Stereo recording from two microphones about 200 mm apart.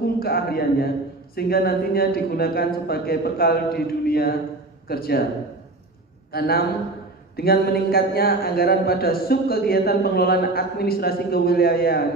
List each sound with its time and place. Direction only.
0.2 s a man's voice: 50° left (ahead or behind)
6.3 s a man's voice: 50° left (ahead or behind)